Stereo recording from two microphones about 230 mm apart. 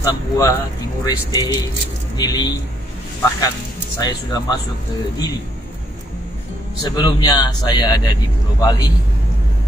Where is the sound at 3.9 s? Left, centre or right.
Centre.